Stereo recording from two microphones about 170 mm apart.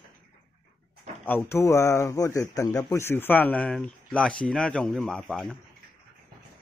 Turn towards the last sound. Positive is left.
turn(degrees=5)  # may be behind; listen again after turning